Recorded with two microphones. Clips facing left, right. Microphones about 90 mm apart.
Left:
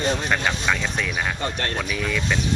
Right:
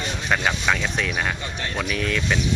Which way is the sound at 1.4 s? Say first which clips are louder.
Left 4 dB; 55° left (ahead or behind).